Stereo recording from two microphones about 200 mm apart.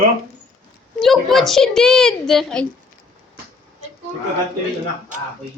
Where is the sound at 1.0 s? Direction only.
Centre (ahead or behind).